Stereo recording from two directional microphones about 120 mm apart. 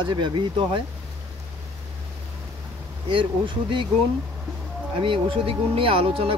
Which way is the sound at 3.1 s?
45° right (ahead or behind).